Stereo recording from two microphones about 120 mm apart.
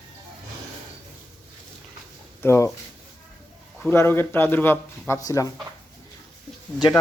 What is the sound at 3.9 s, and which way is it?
Speech, 20° left (ahead or behind).